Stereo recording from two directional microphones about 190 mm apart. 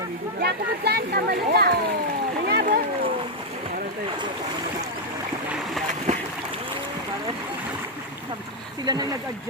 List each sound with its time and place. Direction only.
0.3 s a child's voice: 55° right (ahead or behind)
2.5 s a sound: 60° right (ahead or behind)
8.8 s speech: 20° right (ahead or behind)